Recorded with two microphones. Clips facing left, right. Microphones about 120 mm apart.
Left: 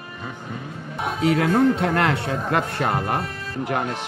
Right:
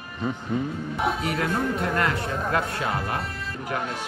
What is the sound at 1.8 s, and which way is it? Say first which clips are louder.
Speech: left 4 dB; 80° left.